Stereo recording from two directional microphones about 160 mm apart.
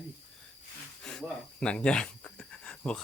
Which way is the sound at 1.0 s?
5° left (ahead or behind).